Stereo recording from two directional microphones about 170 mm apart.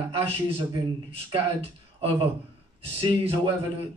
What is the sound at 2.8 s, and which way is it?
Speech, 35° right (ahead or behind).